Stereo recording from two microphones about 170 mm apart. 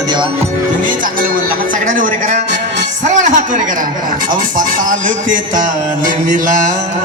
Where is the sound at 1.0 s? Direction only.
55° right (ahead or behind).